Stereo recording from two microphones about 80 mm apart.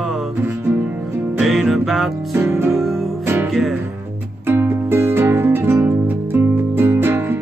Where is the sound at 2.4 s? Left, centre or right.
Right.